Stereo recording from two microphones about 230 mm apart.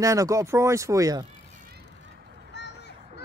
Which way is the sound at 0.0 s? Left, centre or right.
Centre.